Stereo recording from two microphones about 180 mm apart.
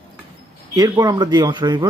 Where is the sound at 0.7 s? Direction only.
20° right (ahead or behind).